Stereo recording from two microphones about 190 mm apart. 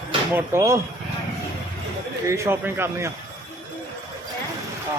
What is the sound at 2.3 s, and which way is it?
Speech, 15° right (ahead or behind).